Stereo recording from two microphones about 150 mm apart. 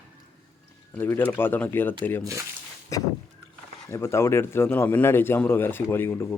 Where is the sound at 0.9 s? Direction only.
15° left (ahead or behind).